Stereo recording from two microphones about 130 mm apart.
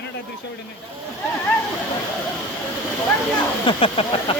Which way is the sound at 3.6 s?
45° left (ahead or behind).